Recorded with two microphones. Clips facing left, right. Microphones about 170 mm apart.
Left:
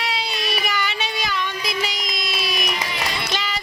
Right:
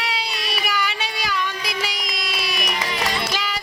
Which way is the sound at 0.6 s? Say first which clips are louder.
Even; 10° right (ahead or behind).